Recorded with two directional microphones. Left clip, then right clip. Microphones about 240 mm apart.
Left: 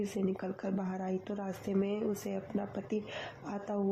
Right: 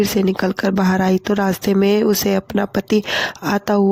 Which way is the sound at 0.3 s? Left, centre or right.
Right.